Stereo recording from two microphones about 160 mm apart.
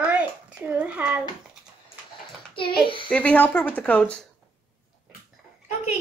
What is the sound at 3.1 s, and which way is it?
Speech, 10° left (ahead or behind).